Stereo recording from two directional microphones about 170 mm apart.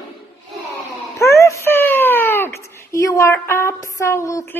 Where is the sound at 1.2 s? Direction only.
15° left (ahead or behind).